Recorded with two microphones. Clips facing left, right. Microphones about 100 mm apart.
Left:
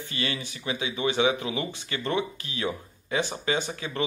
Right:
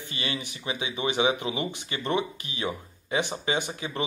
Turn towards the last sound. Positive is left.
turn(degrees=-20)  # may be behind; listen again after turning